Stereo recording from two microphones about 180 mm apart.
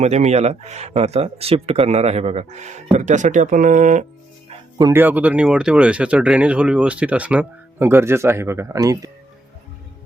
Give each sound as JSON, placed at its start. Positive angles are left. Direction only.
{"t": 0.0, "sound": "speech", "side_deg": -35}
{"t": 4.8, "sound": "speech", "side_deg": -15}